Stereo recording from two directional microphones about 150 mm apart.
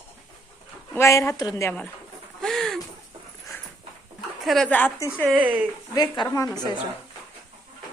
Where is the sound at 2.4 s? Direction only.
Centre (ahead or behind).